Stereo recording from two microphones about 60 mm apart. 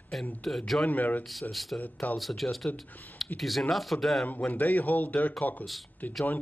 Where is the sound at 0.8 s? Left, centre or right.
Left.